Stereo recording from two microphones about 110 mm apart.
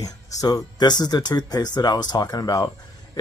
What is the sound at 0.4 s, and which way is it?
Speech, 35° left (ahead or behind).